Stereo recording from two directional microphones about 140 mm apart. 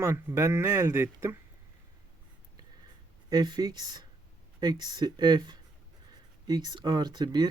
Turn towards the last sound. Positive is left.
turn(degrees=-30)  # may be behind; listen again after turning